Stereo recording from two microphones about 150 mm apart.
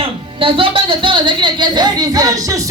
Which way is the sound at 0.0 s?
35° right (ahead or behind).